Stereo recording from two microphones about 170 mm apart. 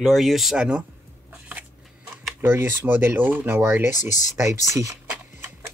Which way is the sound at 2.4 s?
15° right (ahead or behind).